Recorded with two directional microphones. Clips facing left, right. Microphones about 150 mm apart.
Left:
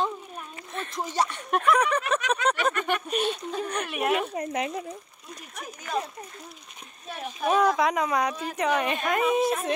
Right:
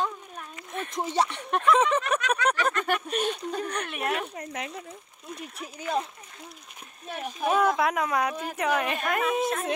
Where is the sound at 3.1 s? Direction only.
10° left (ahead or behind).